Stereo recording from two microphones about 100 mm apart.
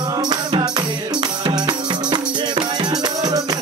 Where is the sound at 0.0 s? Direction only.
45° right (ahead or behind).